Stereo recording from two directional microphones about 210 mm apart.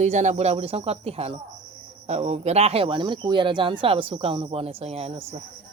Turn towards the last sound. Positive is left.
turn(degrees=-30)  # may be behind; listen again after turning